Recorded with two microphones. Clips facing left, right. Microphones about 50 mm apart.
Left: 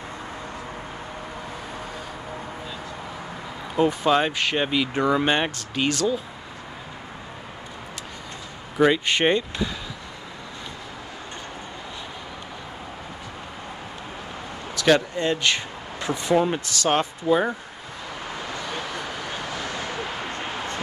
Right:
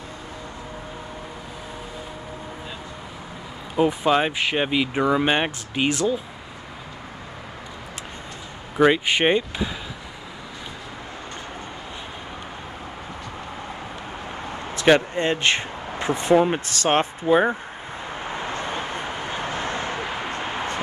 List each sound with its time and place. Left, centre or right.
3.7 s speech: centre
8.7 s speech: centre
14.5 s a sound: right
16.3 s speech: right
16.6 s speech: right
18.3 s a sound: right